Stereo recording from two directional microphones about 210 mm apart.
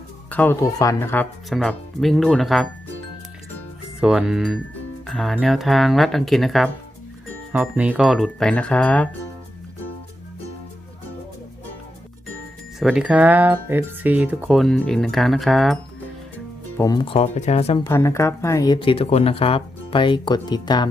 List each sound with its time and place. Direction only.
0.3 s speech: 10° left (ahead or behind)
4.0 s speech: 5° right (ahead or behind)
12.8 s speech: 5° right (ahead or behind)
16.7 s speech: 15° left (ahead or behind)
17.8 s speech: 15° left (ahead or behind)